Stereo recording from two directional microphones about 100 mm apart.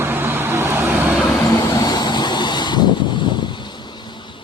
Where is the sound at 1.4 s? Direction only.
35° left (ahead or behind); by 3.7 s 50° left (ahead or behind).